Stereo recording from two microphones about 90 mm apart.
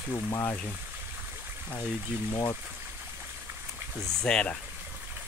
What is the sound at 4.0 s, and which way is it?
Speech, 5° left (ahead or behind).